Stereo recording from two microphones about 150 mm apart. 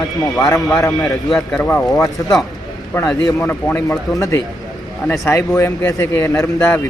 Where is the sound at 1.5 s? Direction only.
15° left (ahead or behind).